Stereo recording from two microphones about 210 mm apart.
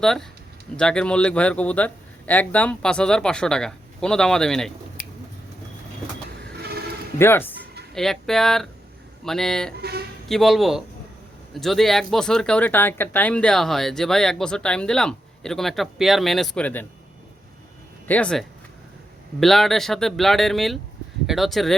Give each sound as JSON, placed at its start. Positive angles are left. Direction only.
{"t": 0.0, "sound": "speech", "side_deg": 0}
{"t": 6.4, "sound": "vehicle", "side_deg": -50}
{"t": 7.2, "sound": "speech", "side_deg": 10}
{"t": 18.1, "sound": "speech", "side_deg": 5}